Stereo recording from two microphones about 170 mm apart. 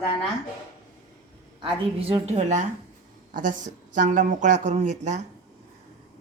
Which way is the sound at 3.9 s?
50° right (ahead or behind).